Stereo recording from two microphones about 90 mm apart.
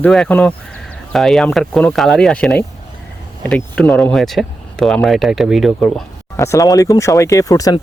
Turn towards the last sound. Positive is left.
turn(degrees=40)  # may be behind; listen again after turning